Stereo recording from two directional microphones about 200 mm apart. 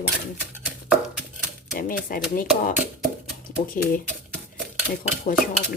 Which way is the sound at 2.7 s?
5° right (ahead or behind).